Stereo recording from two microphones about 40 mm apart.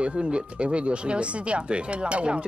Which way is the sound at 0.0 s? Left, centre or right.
Right.